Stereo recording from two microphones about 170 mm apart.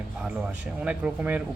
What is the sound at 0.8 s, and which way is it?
Speech, 5° right (ahead or behind).